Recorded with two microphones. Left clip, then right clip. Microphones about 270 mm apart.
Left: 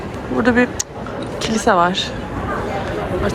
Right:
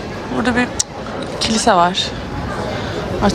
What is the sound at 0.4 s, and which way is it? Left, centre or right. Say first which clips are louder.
Speech: left 2 dB; centre.